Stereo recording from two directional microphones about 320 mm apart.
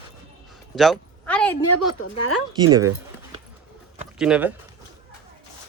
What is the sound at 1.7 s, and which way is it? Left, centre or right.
Speech, left.